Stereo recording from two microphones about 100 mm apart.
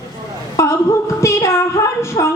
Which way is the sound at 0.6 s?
30° left (ahead or behind).